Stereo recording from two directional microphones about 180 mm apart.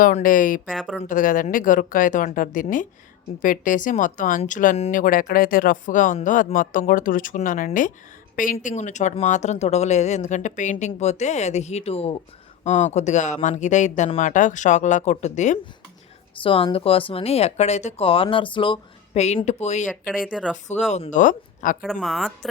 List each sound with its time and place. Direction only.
0.0 s speech: 50° left (ahead or behind)
0.7 s speech: centre (ahead or behind)
1.0 s speech: 50° left (ahead or behind)
16.4 s speech: 30° left (ahead or behind)
20.1 s speech: 5° right (ahead or behind)
20.9 s speech: 40° left (ahead or behind)
21.8 s speech: centre (ahead or behind)